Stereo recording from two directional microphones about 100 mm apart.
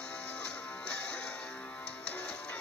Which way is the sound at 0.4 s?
10° left (ahead or behind).